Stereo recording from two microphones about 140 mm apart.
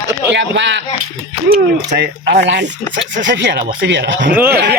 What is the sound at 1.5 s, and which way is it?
Speech, 90° right.